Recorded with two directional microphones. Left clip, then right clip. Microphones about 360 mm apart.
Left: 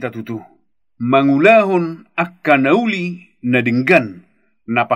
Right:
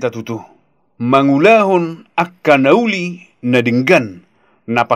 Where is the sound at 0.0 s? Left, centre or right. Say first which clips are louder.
Right 5 dB; centre.